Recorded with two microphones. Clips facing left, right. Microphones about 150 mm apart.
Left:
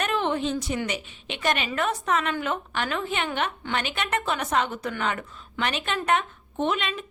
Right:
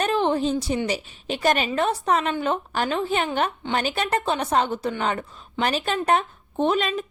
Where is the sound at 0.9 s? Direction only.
35° right (ahead or behind).